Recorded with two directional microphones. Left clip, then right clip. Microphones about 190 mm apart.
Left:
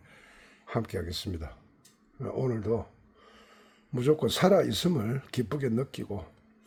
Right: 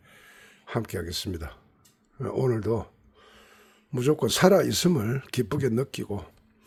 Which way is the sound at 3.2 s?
10° right (ahead or behind).